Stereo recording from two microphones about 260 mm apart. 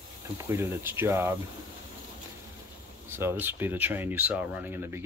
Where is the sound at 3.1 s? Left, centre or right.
Centre.